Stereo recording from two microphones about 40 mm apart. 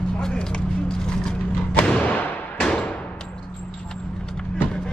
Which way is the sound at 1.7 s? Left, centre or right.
Left.